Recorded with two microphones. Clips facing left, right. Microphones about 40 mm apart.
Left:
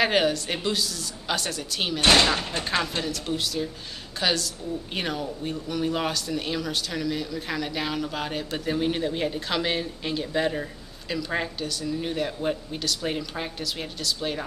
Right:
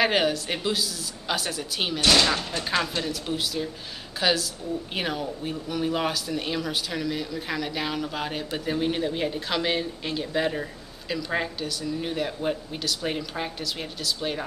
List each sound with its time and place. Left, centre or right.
0.0 s speech: centre
2.0 s speech: left
3.0 s speech: centre